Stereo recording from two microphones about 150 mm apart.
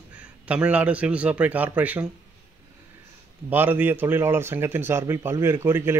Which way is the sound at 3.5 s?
10° right (ahead or behind).